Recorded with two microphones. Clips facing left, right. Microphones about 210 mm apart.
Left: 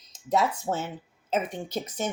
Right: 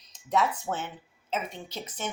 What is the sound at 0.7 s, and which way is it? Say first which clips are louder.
Speech: left 3 dB; 25° left (ahead or behind).